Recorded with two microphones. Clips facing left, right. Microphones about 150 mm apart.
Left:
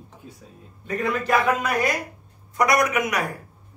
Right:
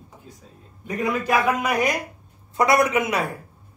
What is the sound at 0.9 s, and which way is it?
A man's voice, 15° right (ahead or behind).